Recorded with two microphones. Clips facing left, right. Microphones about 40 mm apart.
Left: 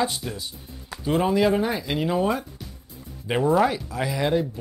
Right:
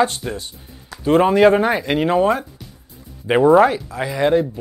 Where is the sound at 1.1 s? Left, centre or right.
Right.